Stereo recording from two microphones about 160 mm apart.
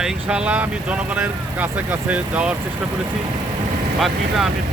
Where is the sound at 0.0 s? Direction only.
5° right (ahead or behind).